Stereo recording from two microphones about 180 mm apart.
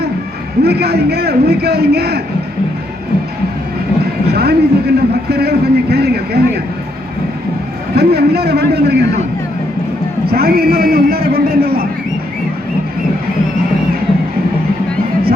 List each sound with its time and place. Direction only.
0.6 s a man's voice: 65° right (ahead or behind)
4.3 s a man's voice: 65° right (ahead or behind)
7.9 s a man's voice: 60° right (ahead or behind)
10.2 s a man's voice: 60° right (ahead or behind)